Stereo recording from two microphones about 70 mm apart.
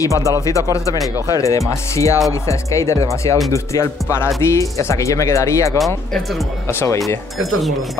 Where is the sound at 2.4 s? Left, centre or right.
Left.